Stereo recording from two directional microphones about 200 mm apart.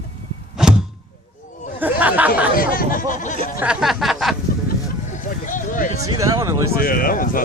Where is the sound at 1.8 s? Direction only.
10° right (ahead or behind).